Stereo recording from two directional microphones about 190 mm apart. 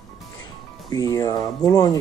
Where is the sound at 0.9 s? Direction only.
20° left (ahead or behind).